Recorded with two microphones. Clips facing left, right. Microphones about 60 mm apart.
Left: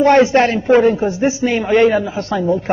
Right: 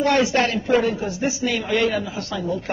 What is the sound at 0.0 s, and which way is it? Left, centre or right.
A man's voice, left.